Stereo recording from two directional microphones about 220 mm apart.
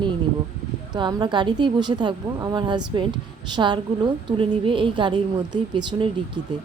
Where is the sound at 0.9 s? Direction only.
20° right (ahead or behind).